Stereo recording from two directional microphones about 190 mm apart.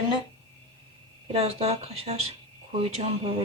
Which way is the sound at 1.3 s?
30° right (ahead or behind).